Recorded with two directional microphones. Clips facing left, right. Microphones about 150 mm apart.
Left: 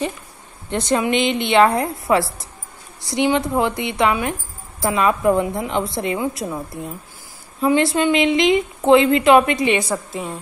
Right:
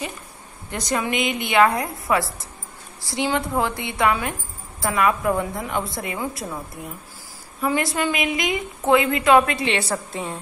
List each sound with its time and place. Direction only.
0.7 s a woman's voice: 25° left (ahead or behind)
7.6 s a woman's voice: 25° left (ahead or behind)
10.1 s a woman's voice: 5° left (ahead or behind)